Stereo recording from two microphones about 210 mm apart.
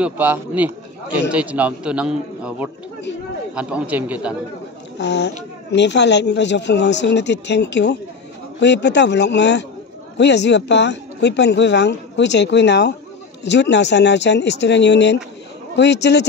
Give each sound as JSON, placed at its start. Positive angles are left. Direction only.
{"t": 0.0, "sound": "a man's voice", "side_deg": -10}
{"t": 4.9, "sound": "speech", "side_deg": 55}